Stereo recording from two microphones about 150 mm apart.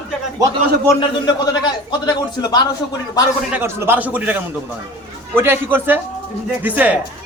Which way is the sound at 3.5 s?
15° right (ahead or behind).